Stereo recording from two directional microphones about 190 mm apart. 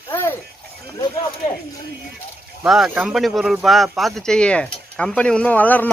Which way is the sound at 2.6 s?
5° right (ahead or behind).